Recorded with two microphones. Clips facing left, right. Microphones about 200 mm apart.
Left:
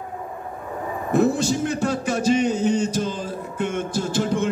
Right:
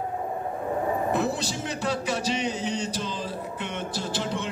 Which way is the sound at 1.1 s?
45° left (ahead or behind).